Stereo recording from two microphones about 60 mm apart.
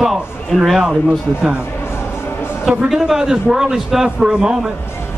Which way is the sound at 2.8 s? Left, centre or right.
Centre.